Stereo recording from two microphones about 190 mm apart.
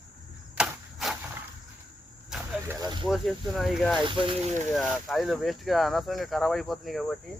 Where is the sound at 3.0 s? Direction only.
Centre (ahead or behind).